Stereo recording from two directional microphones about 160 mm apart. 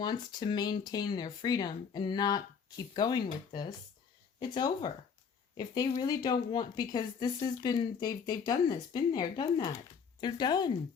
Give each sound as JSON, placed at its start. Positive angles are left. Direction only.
{"t": 0.0, "sound": "speech", "side_deg": 25}